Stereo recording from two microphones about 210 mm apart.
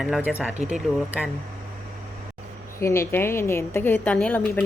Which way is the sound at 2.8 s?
15° left (ahead or behind).